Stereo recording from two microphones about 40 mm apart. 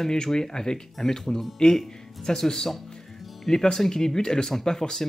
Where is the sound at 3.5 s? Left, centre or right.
Centre.